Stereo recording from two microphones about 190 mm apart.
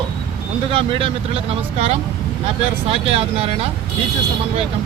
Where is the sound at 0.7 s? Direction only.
30° right (ahead or behind).